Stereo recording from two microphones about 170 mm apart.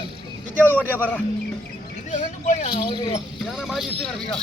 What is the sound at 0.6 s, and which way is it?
Speech, 10° left (ahead or behind).